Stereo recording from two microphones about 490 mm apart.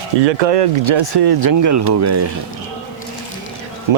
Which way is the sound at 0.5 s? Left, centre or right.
Right.